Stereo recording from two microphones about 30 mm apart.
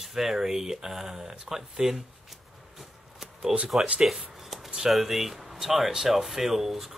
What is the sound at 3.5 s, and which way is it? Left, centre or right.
Speech, centre.